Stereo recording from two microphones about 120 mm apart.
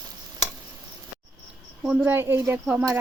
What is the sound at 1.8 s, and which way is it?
Speech, 5° right (ahead or behind).